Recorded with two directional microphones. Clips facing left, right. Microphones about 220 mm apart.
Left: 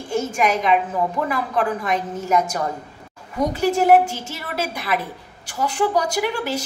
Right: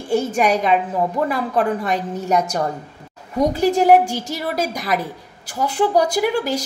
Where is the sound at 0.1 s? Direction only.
35° right (ahead or behind).